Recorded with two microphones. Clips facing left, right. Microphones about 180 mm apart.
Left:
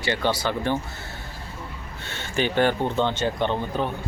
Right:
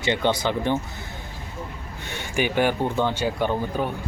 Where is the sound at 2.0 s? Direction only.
15° right (ahead or behind).